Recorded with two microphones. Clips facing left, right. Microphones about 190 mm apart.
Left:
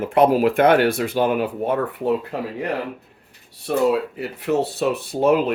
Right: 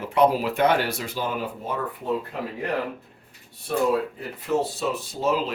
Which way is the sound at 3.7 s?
70° left (ahead or behind).